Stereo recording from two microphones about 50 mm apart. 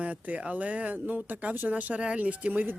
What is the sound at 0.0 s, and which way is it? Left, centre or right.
Speech, right.